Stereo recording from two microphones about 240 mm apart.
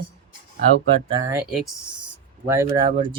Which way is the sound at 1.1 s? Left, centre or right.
Centre.